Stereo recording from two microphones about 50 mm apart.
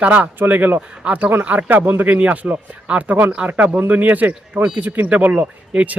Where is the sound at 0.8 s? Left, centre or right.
Right.